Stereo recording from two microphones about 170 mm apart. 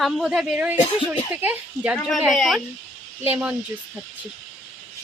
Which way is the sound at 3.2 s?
10° right (ahead or behind).